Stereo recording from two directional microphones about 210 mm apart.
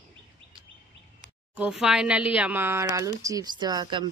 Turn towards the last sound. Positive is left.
turn(degrees=-20)  # may be behind; listen again after turning